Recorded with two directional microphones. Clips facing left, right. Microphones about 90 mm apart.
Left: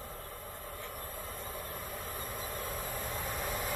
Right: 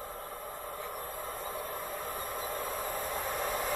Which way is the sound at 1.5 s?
15° right (ahead or behind).